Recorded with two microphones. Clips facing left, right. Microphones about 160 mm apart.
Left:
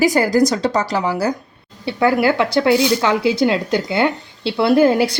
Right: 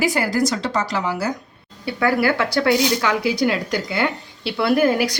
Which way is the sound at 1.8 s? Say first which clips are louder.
Left 3 dB; 20° left (ahead or behind).